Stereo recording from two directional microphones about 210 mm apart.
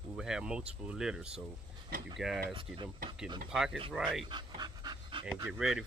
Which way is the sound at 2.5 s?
25° right (ahead or behind).